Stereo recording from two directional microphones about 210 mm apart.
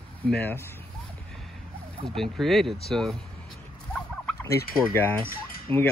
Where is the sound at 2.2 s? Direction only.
Centre (ahead or behind).